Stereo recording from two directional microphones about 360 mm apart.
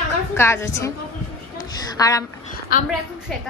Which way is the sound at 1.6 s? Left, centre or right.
Centre.